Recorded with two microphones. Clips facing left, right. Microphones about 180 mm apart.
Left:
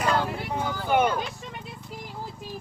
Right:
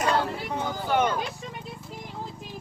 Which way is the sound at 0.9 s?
10° left (ahead or behind).